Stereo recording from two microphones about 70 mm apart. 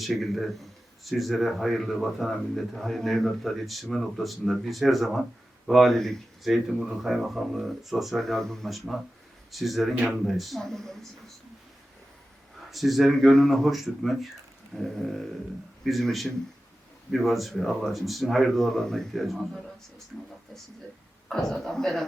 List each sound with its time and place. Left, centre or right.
0.0 s speech: centre
12.7 s speech: centre
21.2 s speech: centre